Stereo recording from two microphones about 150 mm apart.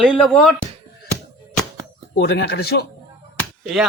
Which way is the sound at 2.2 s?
90° left.